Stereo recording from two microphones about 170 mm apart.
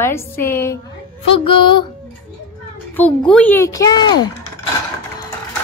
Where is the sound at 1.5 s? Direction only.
30° left (ahead or behind).